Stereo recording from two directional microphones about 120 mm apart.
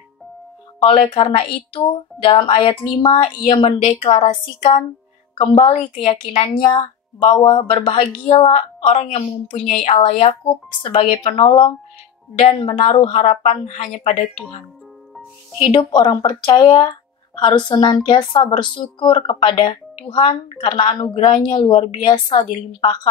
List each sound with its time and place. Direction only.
0.8 s a woman's voice: 45° left (ahead or behind)
5.7 s a woman's voice: 65° left (ahead or behind); by 8.1 s 50° left (ahead or behind)
9.8 s a woman's voice: 55° left (ahead or behind)
13.0 s a woman's voice: 70° left (ahead or behind); by 13.8 s 85° left
13.8 s speech: 65° left (ahead or behind)
15.6 s a woman's voice: 40° left (ahead or behind)